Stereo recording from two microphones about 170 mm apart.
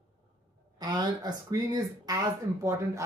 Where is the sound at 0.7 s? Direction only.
25° right (ahead or behind).